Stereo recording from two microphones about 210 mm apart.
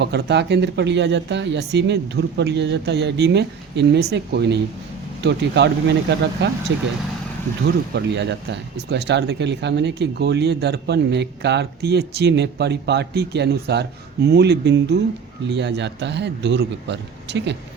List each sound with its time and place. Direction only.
0.0 s speech: 55° right (ahead or behind)
7.9 s speech: 55° right (ahead or behind)